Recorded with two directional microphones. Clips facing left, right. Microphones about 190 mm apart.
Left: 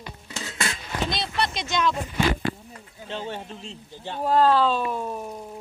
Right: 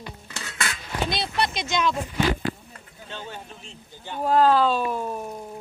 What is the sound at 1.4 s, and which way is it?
Speech, 5° right (ahead or behind).